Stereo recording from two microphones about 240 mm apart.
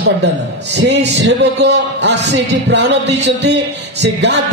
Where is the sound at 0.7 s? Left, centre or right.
Right.